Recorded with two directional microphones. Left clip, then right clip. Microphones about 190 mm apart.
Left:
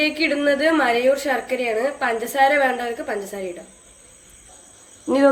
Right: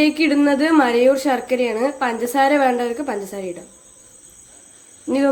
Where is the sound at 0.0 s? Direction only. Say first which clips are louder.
Right 3 dB; 55° right (ahead or behind).